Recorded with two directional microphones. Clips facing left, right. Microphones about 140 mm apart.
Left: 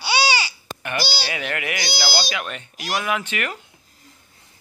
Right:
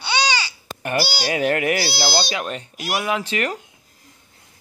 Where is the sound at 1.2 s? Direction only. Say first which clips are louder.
Right 8 dB; 40° right (ahead or behind).